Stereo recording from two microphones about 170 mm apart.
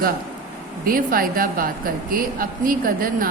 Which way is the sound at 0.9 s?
55° right (ahead or behind).